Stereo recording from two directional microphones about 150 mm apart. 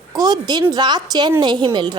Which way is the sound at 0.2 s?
25° right (ahead or behind).